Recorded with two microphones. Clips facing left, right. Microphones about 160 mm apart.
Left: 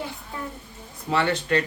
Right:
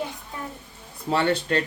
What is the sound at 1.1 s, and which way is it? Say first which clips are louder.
Speech: right 1 dB; 30° right (ahead or behind).